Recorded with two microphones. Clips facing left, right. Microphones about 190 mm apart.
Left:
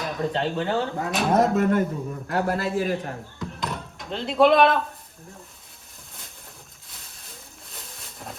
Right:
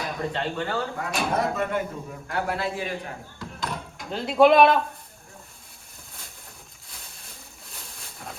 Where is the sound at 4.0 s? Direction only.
5° right (ahead or behind).